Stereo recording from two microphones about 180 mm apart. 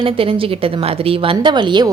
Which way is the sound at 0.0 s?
30° right (ahead or behind).